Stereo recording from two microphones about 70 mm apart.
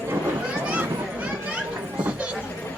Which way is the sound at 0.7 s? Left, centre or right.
Right.